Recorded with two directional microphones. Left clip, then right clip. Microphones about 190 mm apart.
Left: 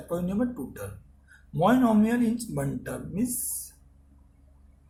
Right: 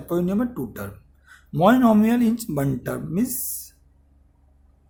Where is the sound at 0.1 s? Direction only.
50° right (ahead or behind).